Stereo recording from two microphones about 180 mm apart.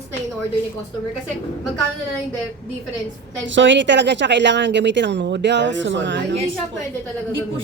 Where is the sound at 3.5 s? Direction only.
90° right.